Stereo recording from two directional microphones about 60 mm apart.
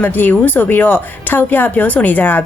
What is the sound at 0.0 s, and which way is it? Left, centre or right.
Speech, left.